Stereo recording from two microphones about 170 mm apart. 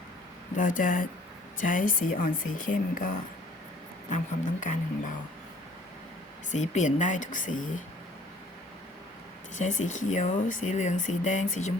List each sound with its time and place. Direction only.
0.5 s speech: 50° left (ahead or behind)
4.1 s speech: 45° left (ahead or behind)
6.5 s speech: 45° left (ahead or behind)
9.6 s speech: 45° left (ahead or behind)